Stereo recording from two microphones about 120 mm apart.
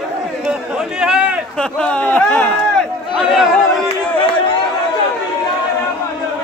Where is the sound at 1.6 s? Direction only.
5° left (ahead or behind).